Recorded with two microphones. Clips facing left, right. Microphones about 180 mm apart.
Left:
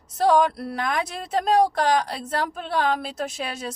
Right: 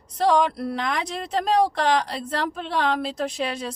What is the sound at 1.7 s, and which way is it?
Speech, 45° left (ahead or behind).